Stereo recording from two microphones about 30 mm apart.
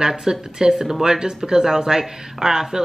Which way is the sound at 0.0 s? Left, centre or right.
Centre.